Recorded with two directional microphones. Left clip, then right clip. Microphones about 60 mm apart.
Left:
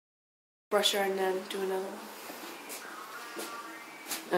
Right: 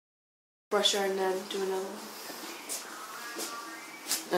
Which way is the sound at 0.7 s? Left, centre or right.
Left.